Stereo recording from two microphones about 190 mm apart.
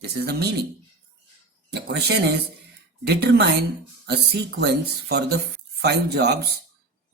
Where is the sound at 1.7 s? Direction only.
60° right (ahead or behind).